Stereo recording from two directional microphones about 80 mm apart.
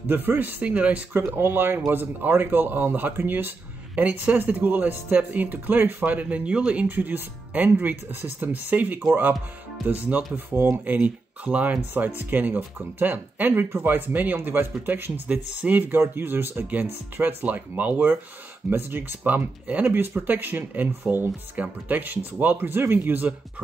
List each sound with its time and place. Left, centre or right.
0.0 s speech: right
1.1 s speech: right